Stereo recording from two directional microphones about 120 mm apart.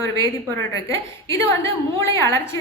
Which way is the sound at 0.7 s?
25° left (ahead or behind).